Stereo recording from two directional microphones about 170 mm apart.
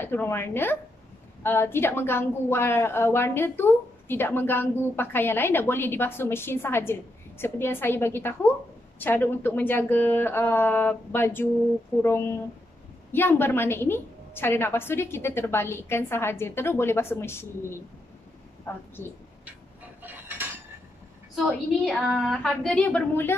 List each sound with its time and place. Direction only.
0.0 s a woman's voice: 15° left (ahead or behind)
20.0 s cutlery: 10° right (ahead or behind)
21.4 s a woman's voice: centre (ahead or behind)